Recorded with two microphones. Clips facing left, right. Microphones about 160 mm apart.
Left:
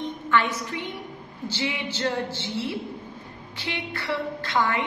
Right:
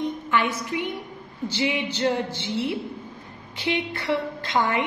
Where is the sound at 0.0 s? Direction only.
15° right (ahead or behind).